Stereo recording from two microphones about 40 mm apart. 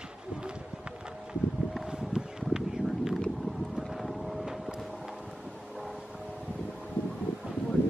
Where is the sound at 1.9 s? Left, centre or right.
Centre.